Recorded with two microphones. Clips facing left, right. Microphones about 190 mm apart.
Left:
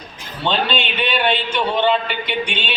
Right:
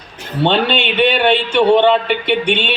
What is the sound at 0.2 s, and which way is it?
A man's voice, 65° right (ahead or behind).